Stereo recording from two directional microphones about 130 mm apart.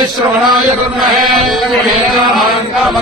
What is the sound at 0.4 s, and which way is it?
Chant, centre (ahead or behind).